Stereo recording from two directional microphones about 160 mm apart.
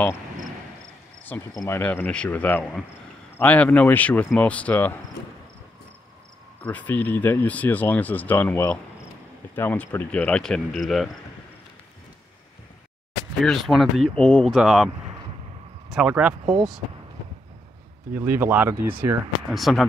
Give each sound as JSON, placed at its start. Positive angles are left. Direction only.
{"t": 1.5, "sound": "speech", "side_deg": 20}
{"t": 1.8, "sound": "speech", "side_deg": 10}
{"t": 6.6, "sound": "speech", "side_deg": 10}
{"t": 13.4, "sound": "speech", "side_deg": 0}
{"t": 15.9, "sound": "speech", "side_deg": -5}
{"t": 18.1, "sound": "speech", "side_deg": -10}
{"t": 19.5, "sound": "speech", "side_deg": 0}